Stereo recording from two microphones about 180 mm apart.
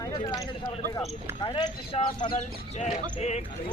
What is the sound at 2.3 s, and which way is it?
Speech, 40° left (ahead or behind).